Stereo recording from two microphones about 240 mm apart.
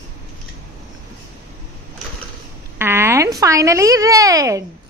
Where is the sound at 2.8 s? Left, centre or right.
Centre.